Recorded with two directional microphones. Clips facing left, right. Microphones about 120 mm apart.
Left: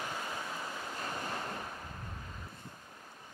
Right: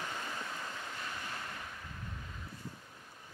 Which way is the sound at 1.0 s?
35° left (ahead or behind).